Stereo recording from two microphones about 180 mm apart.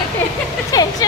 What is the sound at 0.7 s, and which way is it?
Speech, 20° left (ahead or behind).